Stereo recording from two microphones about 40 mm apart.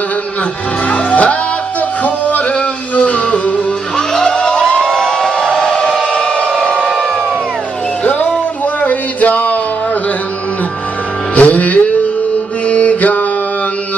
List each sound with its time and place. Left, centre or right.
0.8 s music: left
3.9 s crowd: centre
5.3 s a sound: centre
8.0 s music: left
11.3 s music: left
12.6 s mantra: left